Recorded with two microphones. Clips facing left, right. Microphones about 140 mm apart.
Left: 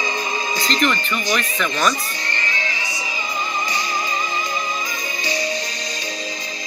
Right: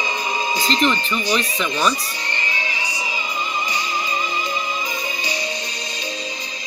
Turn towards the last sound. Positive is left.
turn(degrees=-15)  # may be behind; listen again after turning